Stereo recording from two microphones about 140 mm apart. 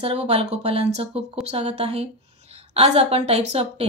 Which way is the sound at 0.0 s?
45° right (ahead or behind).